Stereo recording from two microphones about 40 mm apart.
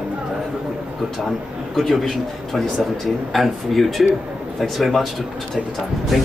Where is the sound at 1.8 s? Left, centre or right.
Centre.